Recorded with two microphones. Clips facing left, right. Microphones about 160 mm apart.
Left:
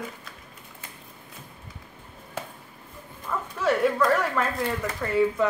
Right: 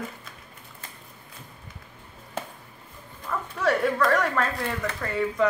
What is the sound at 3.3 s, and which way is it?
Dog, 10° left (ahead or behind).